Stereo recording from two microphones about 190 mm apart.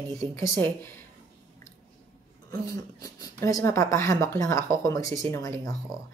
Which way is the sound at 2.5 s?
20° left (ahead or behind).